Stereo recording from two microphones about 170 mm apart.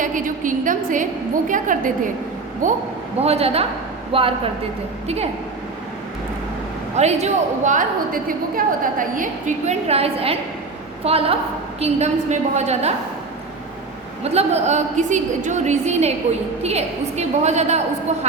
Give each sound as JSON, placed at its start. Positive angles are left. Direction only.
{"t": 0.0, "sound": "a woman's voice", "side_deg": -50}
{"t": 3.2, "sound": "a woman's voice", "side_deg": -35}
{"t": 6.9, "sound": "a woman's voice", "side_deg": -40}
{"t": 14.3, "sound": "a woman's voice", "side_deg": -40}